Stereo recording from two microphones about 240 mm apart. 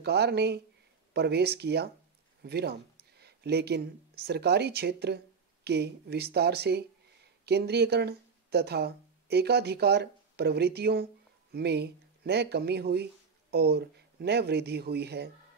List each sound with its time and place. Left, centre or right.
0.0 s speech: right